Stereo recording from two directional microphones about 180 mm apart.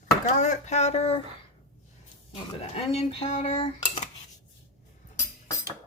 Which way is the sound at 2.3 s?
35° left (ahead or behind).